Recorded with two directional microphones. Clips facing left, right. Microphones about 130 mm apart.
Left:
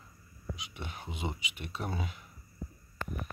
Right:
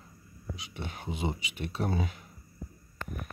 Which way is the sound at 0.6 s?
30° right (ahead or behind).